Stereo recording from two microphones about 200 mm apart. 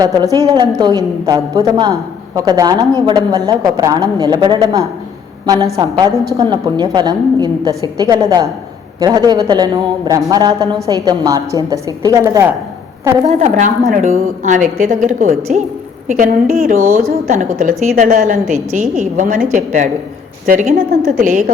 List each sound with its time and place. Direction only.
0.0 s a man's voice: 20° right (ahead or behind)
13.2 s a woman's voice: 35° right (ahead or behind)